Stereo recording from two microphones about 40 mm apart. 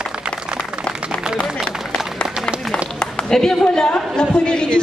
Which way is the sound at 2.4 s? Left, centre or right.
Centre.